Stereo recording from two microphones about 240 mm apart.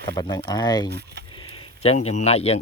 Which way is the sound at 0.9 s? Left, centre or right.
Right.